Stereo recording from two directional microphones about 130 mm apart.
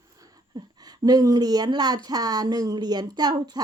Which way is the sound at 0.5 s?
30° right (ahead or behind).